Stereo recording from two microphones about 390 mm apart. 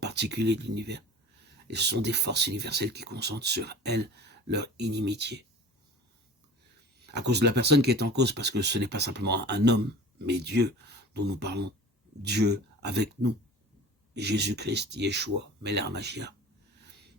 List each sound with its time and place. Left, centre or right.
0.0 s speech: right
7.1 s speech: right